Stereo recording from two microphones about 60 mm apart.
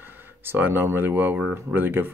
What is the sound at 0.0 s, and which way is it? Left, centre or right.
Speech, right.